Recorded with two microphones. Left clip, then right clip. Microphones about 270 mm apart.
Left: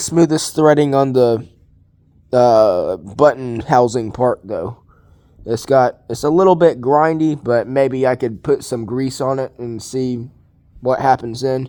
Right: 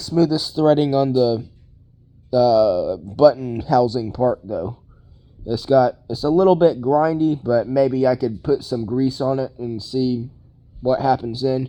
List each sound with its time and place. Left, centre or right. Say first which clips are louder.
0.0 s speech: left 4 dB; left